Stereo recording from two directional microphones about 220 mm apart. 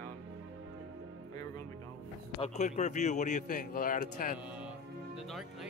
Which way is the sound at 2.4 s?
30° left (ahead or behind).